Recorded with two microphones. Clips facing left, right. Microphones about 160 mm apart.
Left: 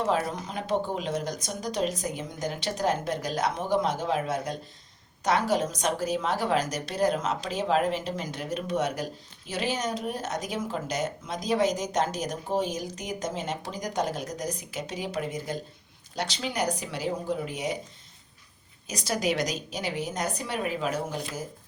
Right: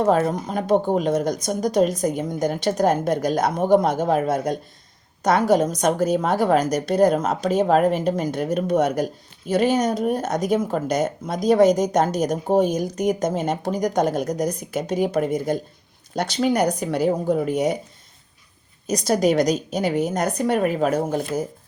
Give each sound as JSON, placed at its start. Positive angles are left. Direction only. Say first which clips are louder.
{"t": 0.0, "sound": "speech", "louder": "right 8 dB", "side_deg": -50}
{"t": 18.9, "sound": "speech", "louder": "right 9 dB", "side_deg": -45}